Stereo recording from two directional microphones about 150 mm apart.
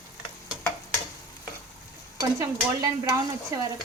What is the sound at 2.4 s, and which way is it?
Stir, 20° right (ahead or behind).